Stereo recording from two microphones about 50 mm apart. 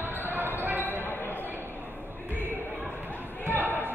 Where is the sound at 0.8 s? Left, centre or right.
Left.